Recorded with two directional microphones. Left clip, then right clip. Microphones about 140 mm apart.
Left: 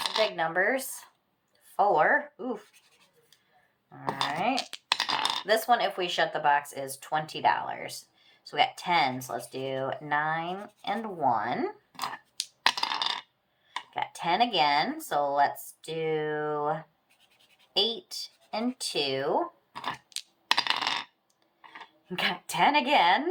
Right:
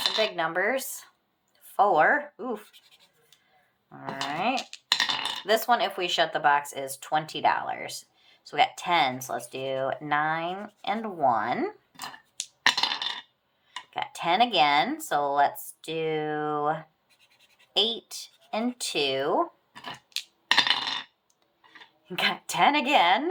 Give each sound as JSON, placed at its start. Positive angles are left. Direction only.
{"t": 0.2, "sound": "speech", "side_deg": -35}
{"t": 4.9, "sound": "a sound", "side_deg": 25}
{"t": 5.5, "sound": "speech", "side_deg": -35}
{"t": 12.6, "sound": "coin", "side_deg": 25}
{"t": 13.9, "sound": "speech", "side_deg": -35}
{"t": 19.8, "sound": "crushing", "side_deg": 40}
{"t": 20.5, "sound": "coin", "side_deg": 25}
{"t": 22.1, "sound": "speech", "side_deg": -35}